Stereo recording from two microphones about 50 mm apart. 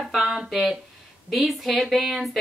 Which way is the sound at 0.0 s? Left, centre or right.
Centre.